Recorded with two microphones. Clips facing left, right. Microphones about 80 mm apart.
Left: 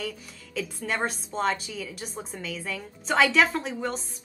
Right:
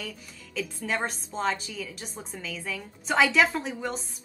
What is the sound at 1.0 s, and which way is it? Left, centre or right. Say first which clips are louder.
A woman's voice: left 2 dB; centre.